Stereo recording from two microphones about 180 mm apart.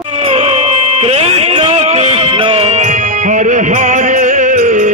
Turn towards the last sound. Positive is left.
turn(degrees=-45)  # may be behind; listen again after turning